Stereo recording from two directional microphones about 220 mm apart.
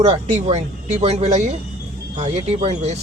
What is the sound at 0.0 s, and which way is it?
A man's voice, 25° right (ahead or behind).